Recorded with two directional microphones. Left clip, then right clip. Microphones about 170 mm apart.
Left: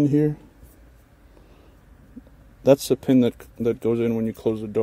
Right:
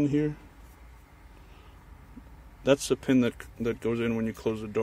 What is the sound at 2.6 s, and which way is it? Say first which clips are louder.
Speech: left 7 dB; 35° left (ahead or behind).